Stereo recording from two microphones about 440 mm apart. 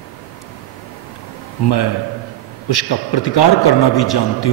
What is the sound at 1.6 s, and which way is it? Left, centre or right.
A man's voice, left.